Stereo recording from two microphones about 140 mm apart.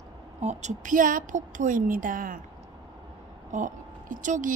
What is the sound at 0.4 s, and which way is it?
Speech, 55° right (ahead or behind).